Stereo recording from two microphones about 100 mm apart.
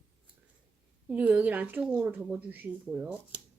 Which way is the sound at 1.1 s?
15° right (ahead or behind).